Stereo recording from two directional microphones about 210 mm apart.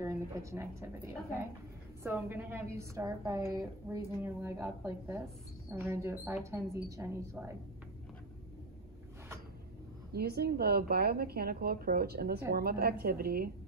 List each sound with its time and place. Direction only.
0.0 s a woman's voice: 15° right (ahead or behind)
10.1 s speech: 50° right (ahead or behind)